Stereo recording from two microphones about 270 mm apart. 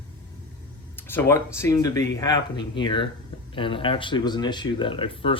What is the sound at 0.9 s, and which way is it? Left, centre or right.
Speech, centre.